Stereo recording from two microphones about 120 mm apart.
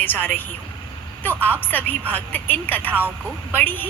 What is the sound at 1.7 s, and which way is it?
A woman's voice, 15° left (ahead or behind).